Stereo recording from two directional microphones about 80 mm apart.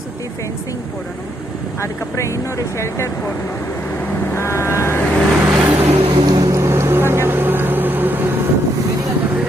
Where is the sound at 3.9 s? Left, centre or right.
Left.